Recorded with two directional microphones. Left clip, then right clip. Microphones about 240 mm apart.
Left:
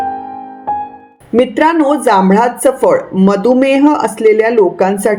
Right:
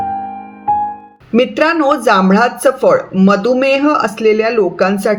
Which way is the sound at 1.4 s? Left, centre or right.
Centre.